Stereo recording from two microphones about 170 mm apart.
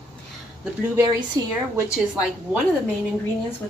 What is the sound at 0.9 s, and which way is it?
Speech, 20° right (ahead or behind).